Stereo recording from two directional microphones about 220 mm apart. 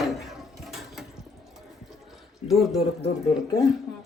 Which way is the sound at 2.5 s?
Centre (ahead or behind).